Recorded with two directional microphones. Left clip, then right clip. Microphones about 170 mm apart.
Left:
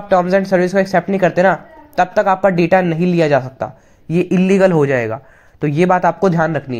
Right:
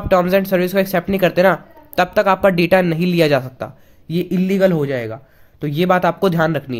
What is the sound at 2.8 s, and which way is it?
Speech, 35° right (ahead or behind).